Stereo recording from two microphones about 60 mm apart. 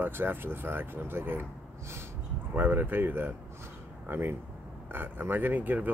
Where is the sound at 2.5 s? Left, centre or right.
Right.